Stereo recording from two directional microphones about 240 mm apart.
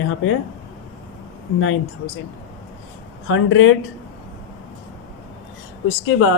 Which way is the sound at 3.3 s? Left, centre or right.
Left.